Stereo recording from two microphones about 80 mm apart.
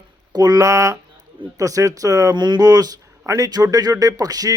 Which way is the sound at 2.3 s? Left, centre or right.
Right.